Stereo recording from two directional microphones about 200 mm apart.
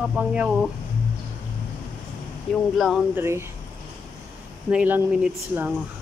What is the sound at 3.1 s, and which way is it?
Speech, 10° right (ahead or behind).